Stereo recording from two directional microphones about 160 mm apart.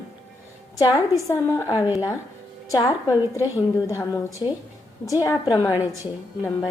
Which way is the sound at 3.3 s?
20° left (ahead or behind).